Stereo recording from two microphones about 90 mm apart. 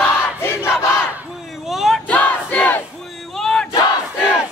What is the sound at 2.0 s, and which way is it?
Battle cry, 15° left (ahead or behind).